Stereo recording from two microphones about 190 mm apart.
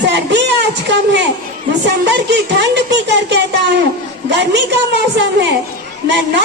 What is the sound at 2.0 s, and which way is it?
Speech, 65° right (ahead or behind).